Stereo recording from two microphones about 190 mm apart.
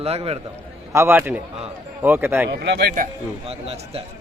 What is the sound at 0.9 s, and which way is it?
A man's voice, 15° right (ahead or behind).